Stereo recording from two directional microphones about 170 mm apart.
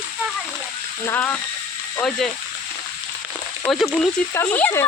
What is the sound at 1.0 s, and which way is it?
Speech, 10° left (ahead or behind).